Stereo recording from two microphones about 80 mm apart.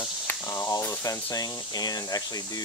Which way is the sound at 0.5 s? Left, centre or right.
Left.